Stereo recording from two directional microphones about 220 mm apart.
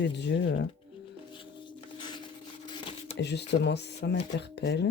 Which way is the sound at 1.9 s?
20° left (ahead or behind).